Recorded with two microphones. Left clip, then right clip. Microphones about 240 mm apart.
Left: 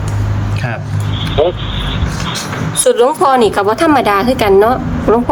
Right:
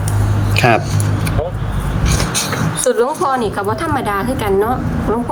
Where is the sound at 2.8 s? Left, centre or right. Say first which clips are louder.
Left 6 dB; left.